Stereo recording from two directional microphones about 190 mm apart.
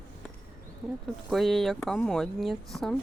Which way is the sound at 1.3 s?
Centre (ahead or behind).